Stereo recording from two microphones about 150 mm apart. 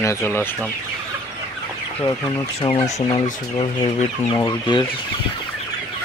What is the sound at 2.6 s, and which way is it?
Speech, 40° left (ahead or behind).